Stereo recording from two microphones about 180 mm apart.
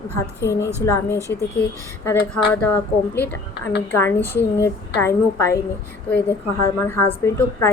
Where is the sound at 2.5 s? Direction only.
10° left (ahead or behind).